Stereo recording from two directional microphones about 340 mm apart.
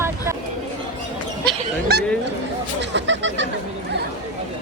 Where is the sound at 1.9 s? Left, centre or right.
Right.